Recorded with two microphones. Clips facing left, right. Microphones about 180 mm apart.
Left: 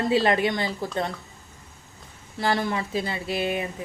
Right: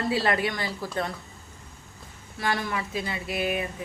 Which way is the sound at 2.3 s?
30° left (ahead or behind).